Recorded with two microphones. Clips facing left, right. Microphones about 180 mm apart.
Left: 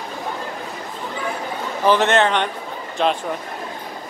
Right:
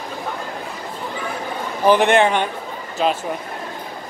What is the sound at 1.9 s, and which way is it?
A man's voice, 15° right (ahead or behind).